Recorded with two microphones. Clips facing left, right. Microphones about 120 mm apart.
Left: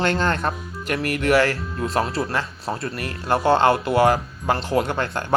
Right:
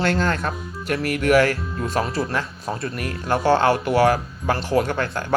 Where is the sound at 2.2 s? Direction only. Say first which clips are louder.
Even; centre (ahead or behind).